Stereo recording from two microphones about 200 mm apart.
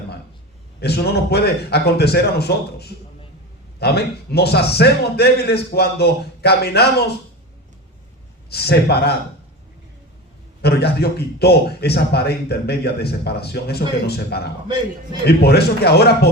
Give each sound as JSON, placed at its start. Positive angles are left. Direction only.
{"t": 0.8, "sound": "a man's voice", "side_deg": 55}
{"t": 8.4, "sound": "a man's voice", "side_deg": 55}
{"t": 10.6, "sound": "a man's voice", "side_deg": 55}